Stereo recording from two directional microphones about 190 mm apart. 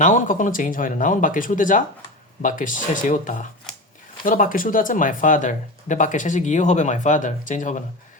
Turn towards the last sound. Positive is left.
turn(degrees=40)  # may be behind; listen again after turning